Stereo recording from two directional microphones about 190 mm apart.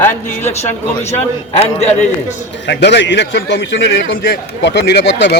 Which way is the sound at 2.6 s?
65° left (ahead or behind).